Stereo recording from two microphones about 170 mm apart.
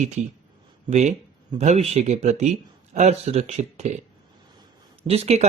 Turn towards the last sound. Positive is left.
turn(degrees=-40)  # may be behind; listen again after turning